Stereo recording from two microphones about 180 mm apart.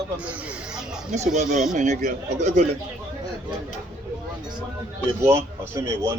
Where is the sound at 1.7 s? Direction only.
40° right (ahead or behind).